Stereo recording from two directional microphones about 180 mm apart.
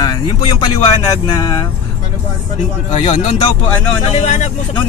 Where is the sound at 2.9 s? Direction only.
40° left (ahead or behind).